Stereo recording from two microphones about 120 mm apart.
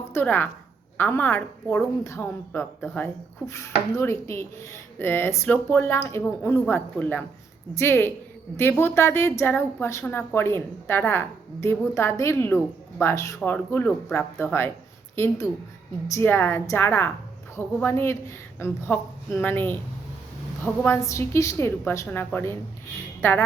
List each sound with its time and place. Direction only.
0.0 s a woman's voice: 20° left (ahead or behind)
2.0 s a woman's voice: 25° left (ahead or behind)
2.8 s a woman's voice: 10° left (ahead or behind)
3.4 s a woman's voice: 25° left (ahead or behind)